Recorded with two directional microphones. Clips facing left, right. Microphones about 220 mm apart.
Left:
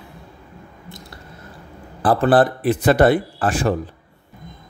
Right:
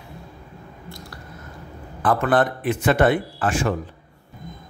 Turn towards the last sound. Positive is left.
turn(degrees=35)  # may be behind; listen again after turning